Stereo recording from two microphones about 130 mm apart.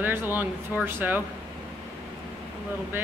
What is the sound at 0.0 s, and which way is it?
Speech, 15° right (ahead or behind).